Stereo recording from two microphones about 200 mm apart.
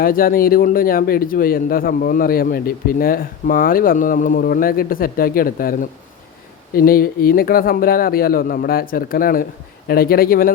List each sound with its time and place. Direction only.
0.0 s a man's voice: 45° left (ahead or behind)